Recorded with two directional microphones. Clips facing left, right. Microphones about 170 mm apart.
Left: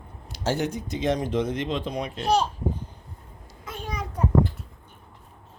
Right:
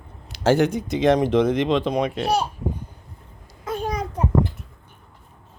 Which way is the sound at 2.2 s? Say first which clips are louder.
Even; 10° right (ahead or behind).